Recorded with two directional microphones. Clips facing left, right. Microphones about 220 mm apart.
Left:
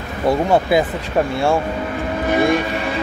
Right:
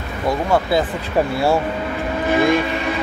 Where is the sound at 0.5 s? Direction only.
20° left (ahead or behind).